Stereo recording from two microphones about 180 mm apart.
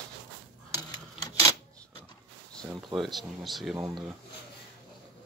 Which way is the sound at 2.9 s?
Centre (ahead or behind).